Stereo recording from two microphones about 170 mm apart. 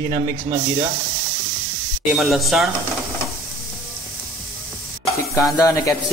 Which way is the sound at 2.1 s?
Centre (ahead or behind).